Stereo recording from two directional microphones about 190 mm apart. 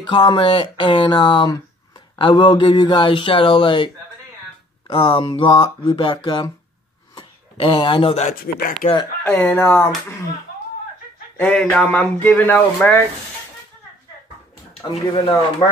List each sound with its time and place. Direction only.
0.0 s speech: 25° left (ahead or behind)
9.2 s speech: 10° left (ahead or behind)
11.3 s speech: 5° left (ahead or behind)
14.7 s speech: 30° left (ahead or behind)